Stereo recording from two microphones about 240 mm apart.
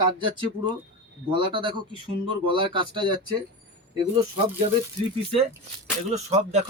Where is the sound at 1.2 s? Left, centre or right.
Right.